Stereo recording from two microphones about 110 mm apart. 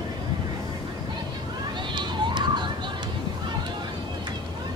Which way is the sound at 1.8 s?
45° right (ahead or behind).